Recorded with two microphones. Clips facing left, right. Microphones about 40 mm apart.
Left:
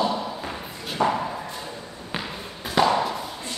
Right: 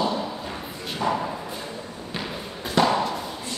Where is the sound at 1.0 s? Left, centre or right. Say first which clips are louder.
Left 3 dB; left.